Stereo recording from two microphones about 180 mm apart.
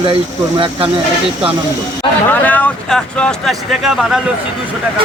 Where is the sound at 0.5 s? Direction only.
30° right (ahead or behind).